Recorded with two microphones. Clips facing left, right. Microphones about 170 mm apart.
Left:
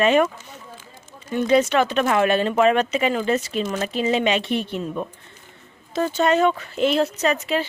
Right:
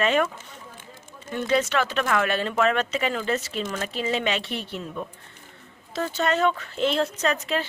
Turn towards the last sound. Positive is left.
turn(degrees=0)  # may be behind; listen again after turning